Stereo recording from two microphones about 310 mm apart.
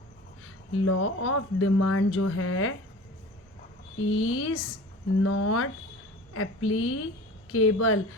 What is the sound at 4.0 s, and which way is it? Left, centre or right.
Speech, left.